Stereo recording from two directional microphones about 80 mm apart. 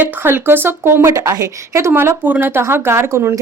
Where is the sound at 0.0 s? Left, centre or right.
Right.